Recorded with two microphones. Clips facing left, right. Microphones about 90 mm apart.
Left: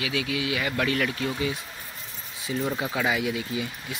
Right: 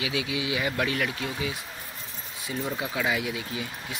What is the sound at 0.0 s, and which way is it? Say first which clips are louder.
Speech: left 1 dB; 25° right (ahead or behind).